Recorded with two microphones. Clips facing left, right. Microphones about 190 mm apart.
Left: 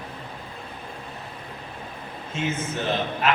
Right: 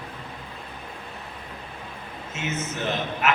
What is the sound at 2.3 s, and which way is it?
A man's voice, 30° left (ahead or behind).